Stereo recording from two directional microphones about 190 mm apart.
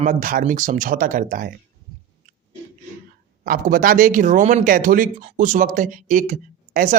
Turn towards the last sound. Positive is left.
turn(degrees=-40)  # may be behind; listen again after turning